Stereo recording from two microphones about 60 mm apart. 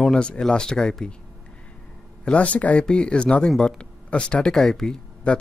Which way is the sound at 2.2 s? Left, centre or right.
Left.